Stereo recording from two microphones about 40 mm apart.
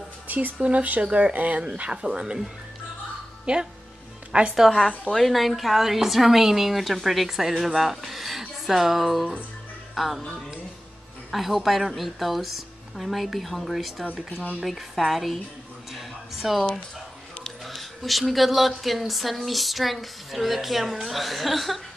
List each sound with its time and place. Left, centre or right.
0.3 s speech: right
0.6 s speech: right
1.9 s speech: right
3.5 s speech: right
5.1 s a woman's voice: centre
11.3 s a woman's voice: centre
15.9 s a sound: centre
17.6 s a woman's voice: centre